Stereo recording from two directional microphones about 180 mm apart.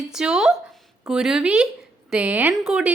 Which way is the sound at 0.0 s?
5° right (ahead or behind).